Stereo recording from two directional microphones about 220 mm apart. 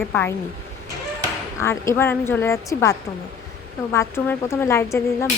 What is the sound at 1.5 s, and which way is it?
Speech, 15° left (ahead or behind).